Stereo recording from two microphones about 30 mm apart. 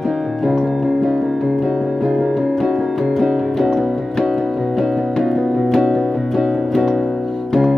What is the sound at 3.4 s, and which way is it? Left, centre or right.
Music, centre.